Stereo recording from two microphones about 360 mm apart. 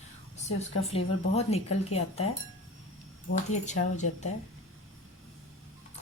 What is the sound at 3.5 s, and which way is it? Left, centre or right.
Speech, centre.